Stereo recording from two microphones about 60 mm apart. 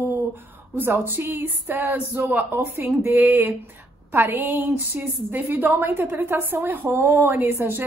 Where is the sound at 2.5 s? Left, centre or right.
Right.